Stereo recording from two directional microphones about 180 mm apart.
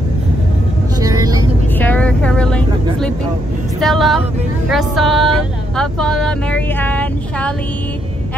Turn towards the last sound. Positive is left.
turn(degrees=10)  # may be behind; listen again after turning